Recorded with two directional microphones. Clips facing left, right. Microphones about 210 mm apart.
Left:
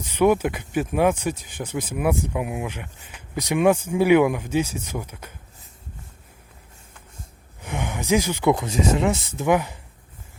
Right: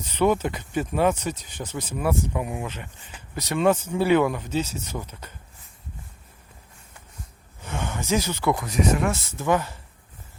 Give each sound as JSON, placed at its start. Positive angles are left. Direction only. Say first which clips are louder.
{"t": 0.0, "sound": "speech", "louder": "left 3 dB", "side_deg": 10}
{"t": 7.6, "sound": "speech", "louder": "left 2 dB", "side_deg": 15}